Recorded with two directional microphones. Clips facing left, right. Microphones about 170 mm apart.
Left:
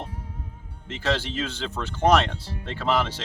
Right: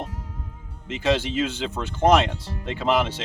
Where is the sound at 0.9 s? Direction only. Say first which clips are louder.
Right 4 dB; 10° right (ahead or behind).